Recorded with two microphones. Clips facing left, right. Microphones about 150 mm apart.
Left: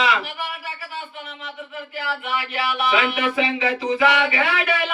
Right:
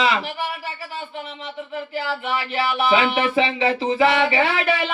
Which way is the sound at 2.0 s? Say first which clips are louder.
Right 1 dB; 30° right (ahead or behind).